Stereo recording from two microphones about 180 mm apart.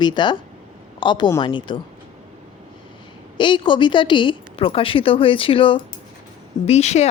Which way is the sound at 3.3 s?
25° left (ahead or behind).